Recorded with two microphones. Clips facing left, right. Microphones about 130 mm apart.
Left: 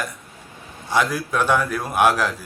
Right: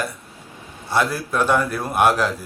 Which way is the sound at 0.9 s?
5° right (ahead or behind).